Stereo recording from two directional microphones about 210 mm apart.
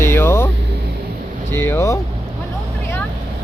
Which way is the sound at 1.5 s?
10° left (ahead or behind).